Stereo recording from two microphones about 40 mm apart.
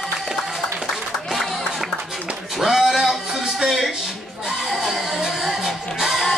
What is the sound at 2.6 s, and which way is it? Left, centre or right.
Music, centre.